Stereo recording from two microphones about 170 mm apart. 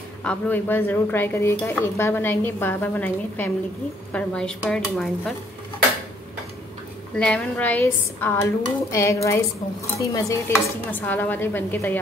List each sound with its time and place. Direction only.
0.2 s speech: 10° left (ahead or behind)
7.2 s speech: 5° left (ahead or behind)